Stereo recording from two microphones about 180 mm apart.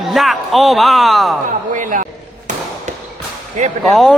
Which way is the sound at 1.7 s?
45° right (ahead or behind).